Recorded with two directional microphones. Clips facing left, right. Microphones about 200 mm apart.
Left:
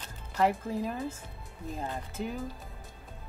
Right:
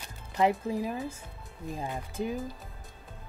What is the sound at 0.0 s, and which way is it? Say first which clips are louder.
Music: right 1 dB; 15° right (ahead or behind).